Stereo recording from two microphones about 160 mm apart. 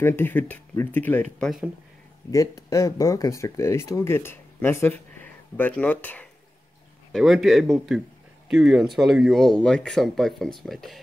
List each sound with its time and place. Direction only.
0.0 s speech: 15° left (ahead or behind)
2.3 s speech: 20° left (ahead or behind)
7.1 s speech: centre (ahead or behind)